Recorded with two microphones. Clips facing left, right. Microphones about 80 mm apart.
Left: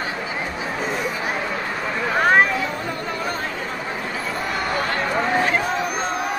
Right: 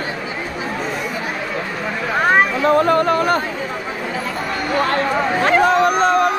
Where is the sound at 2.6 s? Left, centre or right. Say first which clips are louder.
Right 12 dB; right.